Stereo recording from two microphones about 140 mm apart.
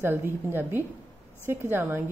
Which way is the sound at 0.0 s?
15° right (ahead or behind).